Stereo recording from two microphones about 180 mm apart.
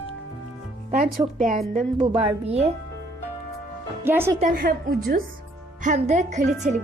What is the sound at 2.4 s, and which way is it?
Speech, 35° right (ahead or behind).